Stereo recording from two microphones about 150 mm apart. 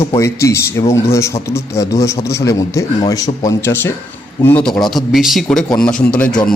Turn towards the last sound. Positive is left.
turn(degrees=10)  # may be behind; listen again after turning